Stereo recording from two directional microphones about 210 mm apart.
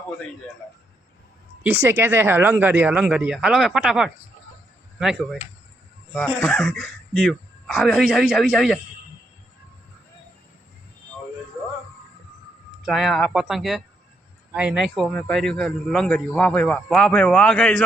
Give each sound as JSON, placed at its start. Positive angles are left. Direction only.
{"t": 1.6, "sound": "a man's voice", "side_deg": -10}
{"t": 12.8, "sound": "a man's voice", "side_deg": 0}